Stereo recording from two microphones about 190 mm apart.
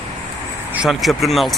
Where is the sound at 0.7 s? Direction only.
Centre (ahead or behind).